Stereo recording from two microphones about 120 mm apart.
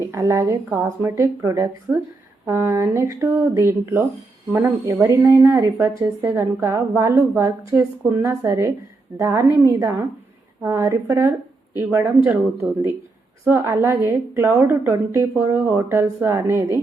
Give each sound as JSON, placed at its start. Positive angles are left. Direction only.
{"t": 0.1, "sound": "speech", "side_deg": -25}
{"t": 13.4, "sound": "speech", "side_deg": -20}